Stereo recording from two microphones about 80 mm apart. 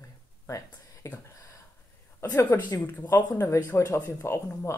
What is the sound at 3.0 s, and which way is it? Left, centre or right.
Speech, left.